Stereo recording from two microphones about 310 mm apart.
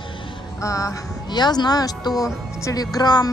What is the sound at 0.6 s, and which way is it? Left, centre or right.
Speech, centre.